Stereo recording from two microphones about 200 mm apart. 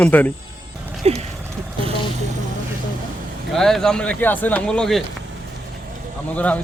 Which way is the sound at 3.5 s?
Centre (ahead or behind).